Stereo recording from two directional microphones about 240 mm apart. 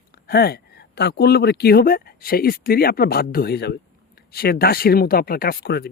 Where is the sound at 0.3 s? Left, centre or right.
Left.